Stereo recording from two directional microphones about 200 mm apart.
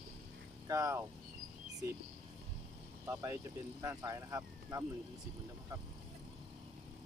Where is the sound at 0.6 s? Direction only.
15° right (ahead or behind).